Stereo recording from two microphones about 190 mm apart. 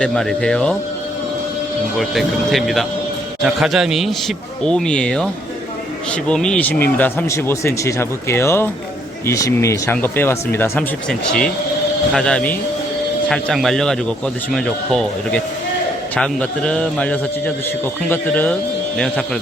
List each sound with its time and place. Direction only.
0.0 s a man's voice: 5° left (ahead or behind)
2.0 s a man's voice: centre (ahead or behind)